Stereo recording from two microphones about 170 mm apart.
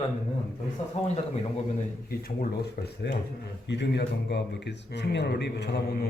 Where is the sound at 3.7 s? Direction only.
85° left.